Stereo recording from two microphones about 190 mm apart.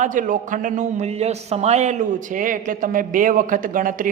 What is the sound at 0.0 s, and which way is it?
A man's voice, 45° right (ahead or behind).